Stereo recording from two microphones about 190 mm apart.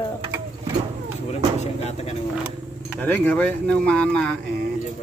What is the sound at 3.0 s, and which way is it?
Speech, 10° left (ahead or behind).